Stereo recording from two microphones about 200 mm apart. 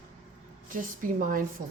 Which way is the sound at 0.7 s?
40° right (ahead or behind).